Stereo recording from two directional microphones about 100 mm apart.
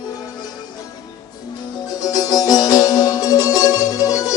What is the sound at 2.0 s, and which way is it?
Music, 40° left (ahead or behind).